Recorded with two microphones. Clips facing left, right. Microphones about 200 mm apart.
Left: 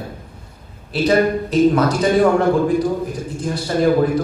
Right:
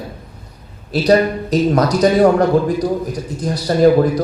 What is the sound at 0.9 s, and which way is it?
A man's voice, 40° right (ahead or behind).